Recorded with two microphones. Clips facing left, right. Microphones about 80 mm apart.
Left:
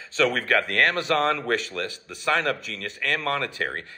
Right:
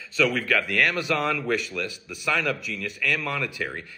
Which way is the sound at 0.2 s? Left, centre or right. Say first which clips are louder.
Left 1 dB; left.